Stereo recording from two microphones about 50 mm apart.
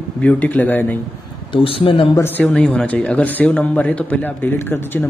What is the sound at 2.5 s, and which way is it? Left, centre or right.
Speech, left.